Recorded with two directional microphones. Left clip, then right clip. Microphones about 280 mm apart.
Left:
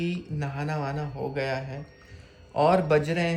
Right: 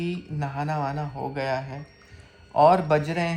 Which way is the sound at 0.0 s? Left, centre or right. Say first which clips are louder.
Right 1 dB; centre.